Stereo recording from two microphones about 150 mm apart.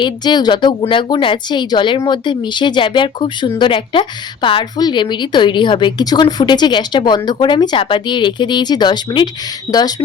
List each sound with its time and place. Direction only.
0.0 s a woman's voice: 30° left (ahead or behind)